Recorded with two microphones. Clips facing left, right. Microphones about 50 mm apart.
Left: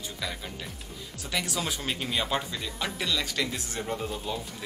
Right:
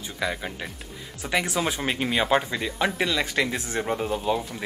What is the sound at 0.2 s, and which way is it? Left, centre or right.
Speech, right.